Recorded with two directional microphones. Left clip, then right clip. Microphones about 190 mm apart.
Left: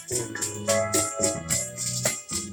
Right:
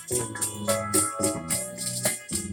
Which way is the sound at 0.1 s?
45° right (ahead or behind).